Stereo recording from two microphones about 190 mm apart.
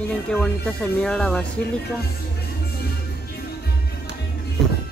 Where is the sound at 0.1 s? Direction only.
5° left (ahead or behind).